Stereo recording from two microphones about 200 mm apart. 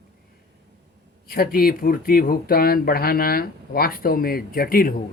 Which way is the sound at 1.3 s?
50° left (ahead or behind).